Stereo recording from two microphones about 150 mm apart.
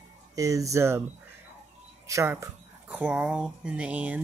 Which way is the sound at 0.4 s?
20° right (ahead or behind).